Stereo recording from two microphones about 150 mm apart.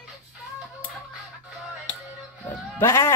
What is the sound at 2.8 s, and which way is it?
Speech, 15° left (ahead or behind).